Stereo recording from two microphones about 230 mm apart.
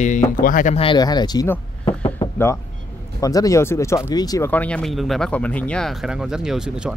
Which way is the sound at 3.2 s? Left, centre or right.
Centre.